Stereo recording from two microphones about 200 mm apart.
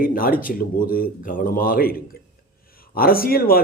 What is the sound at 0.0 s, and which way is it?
A man's voice, 45° left (ahead or behind).